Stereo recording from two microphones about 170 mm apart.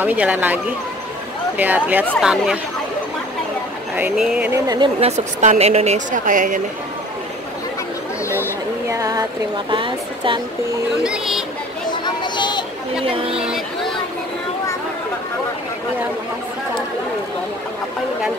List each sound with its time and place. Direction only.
0.0 s speech: 10° right (ahead or behind)
1.6 s speech: 10° right (ahead or behind)
3.9 s speech: 5° right (ahead or behind)
4.5 s a woman's voice: 25° right (ahead or behind)
5.1 s a woman's voice: 40° right (ahead or behind)
8.9 s a woman's voice: 20° right (ahead or behind)
11.1 s speech: centre (ahead or behind)
11.9 s a sound: 25° left (ahead or behind)
13.0 s speech: 35° right (ahead or behind)
13.3 s a sound: 5° right (ahead or behind)